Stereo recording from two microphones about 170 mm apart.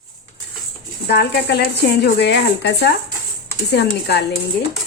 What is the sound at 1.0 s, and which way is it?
A woman's voice, 75° left (ahead or behind).